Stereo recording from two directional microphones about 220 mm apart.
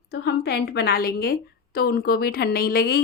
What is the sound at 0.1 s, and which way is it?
A woman's voice, 50° left (ahead or behind).